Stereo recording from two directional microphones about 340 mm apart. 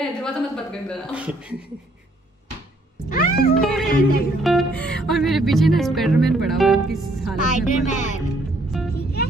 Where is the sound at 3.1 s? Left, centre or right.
Left.